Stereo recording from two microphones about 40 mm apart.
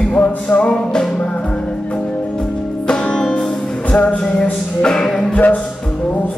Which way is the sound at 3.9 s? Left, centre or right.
Left.